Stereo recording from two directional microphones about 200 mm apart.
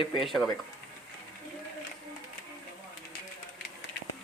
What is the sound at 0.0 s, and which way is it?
Speech, 25° left (ahead or behind).